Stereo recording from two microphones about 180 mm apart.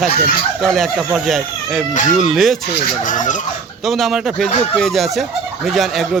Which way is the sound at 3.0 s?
45° left (ahead or behind).